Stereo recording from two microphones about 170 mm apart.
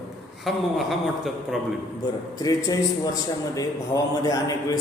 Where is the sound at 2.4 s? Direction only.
20° left (ahead or behind).